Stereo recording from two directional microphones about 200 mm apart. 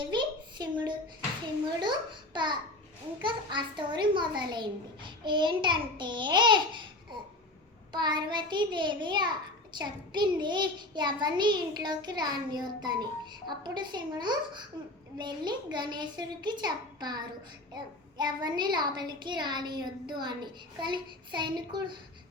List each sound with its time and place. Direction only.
0.0 s a sound: 20° right (ahead or behind)
1.8 s speech: 20° right (ahead or behind)
7.9 s speech: 20° right (ahead or behind)